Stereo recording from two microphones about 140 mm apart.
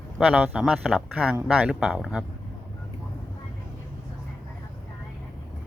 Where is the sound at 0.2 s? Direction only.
10° right (ahead or behind).